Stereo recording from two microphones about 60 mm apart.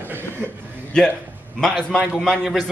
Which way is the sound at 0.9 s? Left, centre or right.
Centre.